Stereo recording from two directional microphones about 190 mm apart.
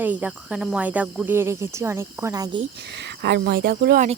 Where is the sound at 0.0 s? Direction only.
10° right (ahead or behind).